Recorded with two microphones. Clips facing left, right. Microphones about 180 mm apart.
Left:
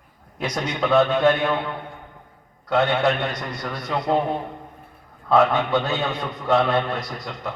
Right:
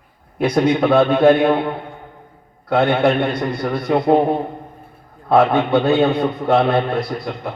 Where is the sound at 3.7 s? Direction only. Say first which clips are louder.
Right 10 dB; 55° right (ahead or behind).